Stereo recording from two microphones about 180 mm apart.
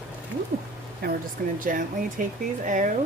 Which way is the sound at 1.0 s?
55° right (ahead or behind).